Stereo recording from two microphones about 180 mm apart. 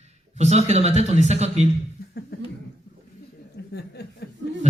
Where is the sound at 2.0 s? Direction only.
55° left (ahead or behind).